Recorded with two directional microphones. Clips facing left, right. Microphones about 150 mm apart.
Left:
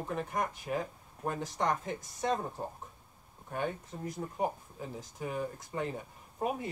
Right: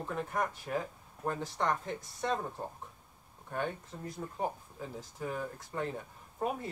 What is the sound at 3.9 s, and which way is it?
Speech, 15° left (ahead or behind).